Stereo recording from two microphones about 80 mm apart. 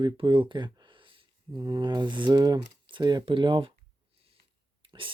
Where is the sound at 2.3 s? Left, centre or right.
Right.